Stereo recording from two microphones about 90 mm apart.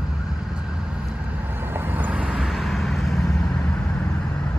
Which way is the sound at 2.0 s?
15° right (ahead or behind).